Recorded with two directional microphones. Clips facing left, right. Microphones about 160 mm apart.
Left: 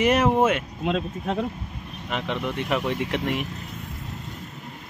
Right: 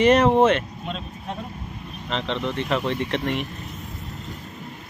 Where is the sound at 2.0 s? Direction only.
10° left (ahead or behind).